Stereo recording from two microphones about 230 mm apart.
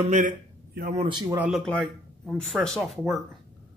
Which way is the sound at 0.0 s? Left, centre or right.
Right.